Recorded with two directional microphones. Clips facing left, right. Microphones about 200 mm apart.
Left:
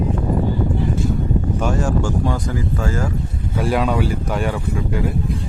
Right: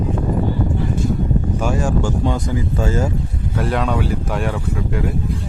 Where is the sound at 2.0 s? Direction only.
20° right (ahead or behind).